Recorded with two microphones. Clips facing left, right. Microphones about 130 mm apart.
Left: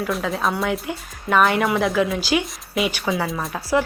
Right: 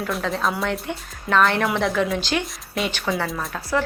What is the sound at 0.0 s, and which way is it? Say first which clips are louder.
Speech: left 1 dB; centre (ahead or behind).